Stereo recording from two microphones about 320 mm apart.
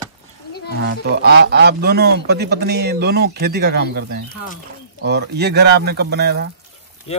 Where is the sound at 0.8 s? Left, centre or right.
Right.